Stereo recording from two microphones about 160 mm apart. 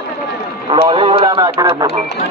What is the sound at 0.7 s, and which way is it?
Clip-clop, 30° right (ahead or behind).